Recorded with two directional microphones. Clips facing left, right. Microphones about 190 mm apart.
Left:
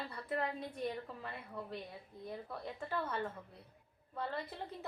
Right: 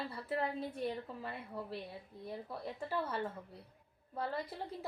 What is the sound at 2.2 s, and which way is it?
A woman's voice, 5° right (ahead or behind).